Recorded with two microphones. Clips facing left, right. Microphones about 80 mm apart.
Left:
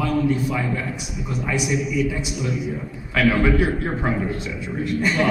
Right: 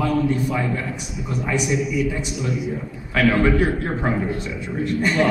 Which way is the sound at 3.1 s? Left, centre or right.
Centre.